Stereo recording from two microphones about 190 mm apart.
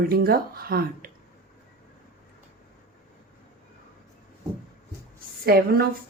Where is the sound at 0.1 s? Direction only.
50° right (ahead or behind).